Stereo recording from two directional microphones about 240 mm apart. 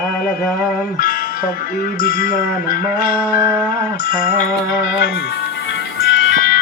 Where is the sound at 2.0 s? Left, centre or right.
Left.